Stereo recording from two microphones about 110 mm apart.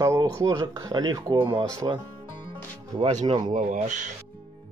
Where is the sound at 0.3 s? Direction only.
30° right (ahead or behind).